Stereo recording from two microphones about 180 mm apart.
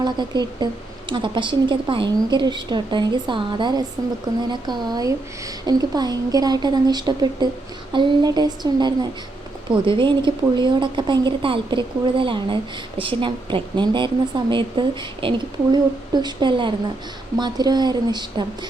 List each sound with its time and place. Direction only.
0.0 s a woman's voice: 25° right (ahead or behind)